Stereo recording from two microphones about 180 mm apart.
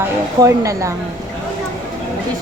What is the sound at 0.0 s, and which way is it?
Speech, 15° right (ahead or behind).